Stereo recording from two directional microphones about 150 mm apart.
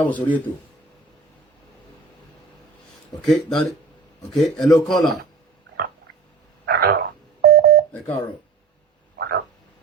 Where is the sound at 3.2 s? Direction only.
5° left (ahead or behind).